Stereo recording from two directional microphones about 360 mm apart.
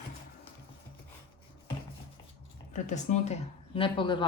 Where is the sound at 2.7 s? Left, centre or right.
Centre.